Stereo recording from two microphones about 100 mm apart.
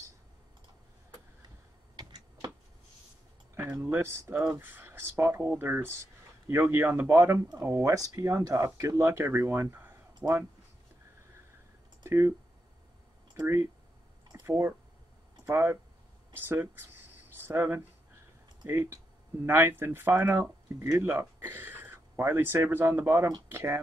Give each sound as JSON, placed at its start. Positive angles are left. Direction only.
{"t": 2.0, "sound": "tick-tock", "side_deg": -45}
{"t": 3.6, "sound": "speech", "side_deg": -20}
{"t": 12.0, "sound": "speech", "side_deg": -25}
{"t": 14.4, "sound": "speech", "side_deg": -25}